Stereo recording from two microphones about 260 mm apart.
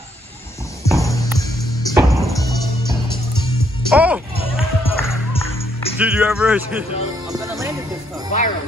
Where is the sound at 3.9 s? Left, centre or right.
Centre.